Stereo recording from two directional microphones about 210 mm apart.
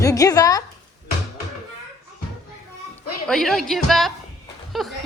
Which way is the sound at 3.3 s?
Centre (ahead or behind).